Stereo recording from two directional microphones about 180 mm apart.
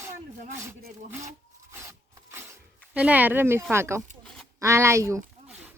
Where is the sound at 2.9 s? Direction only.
10° right (ahead or behind).